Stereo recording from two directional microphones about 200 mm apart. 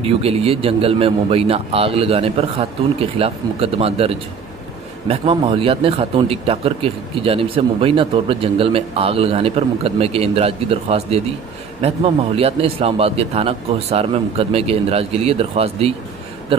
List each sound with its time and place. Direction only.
0.0 s speech: 30° right (ahead or behind)